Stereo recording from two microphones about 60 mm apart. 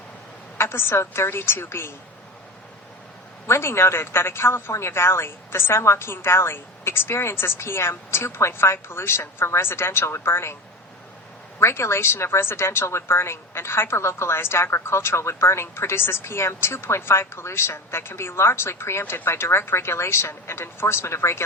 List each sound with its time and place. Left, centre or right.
0.6 s a woman's voice: left
3.4 s a woman's voice: left
11.6 s a woman's voice: left